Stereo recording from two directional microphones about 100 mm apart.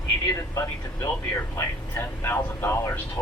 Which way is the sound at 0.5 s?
35° left (ahead or behind).